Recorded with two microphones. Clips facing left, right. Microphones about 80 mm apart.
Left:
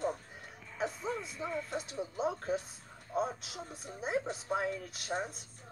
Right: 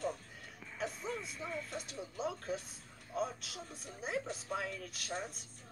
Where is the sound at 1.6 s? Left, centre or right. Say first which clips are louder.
Left 6 dB; left.